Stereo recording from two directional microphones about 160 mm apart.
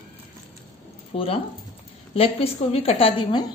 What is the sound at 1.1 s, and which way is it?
Speech, 40° left (ahead or behind).